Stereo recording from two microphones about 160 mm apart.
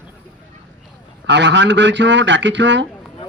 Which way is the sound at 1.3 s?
90° right.